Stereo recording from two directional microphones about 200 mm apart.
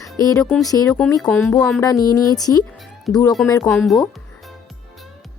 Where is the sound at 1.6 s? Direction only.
5° left (ahead or behind).